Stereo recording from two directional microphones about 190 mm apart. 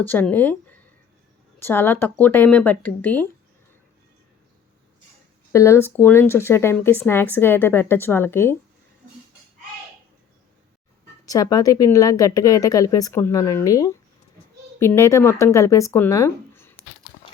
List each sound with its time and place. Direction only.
0.1 s speech: 10° left (ahead or behind)
5.5 s speech: 15° left (ahead or behind)
11.3 s speech: 20° left (ahead or behind)